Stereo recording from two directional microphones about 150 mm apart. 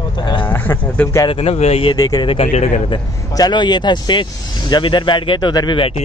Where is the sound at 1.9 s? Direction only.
25° left (ahead or behind).